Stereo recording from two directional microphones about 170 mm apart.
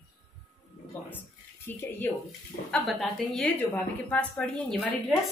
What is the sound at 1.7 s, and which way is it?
Speech, 15° left (ahead or behind).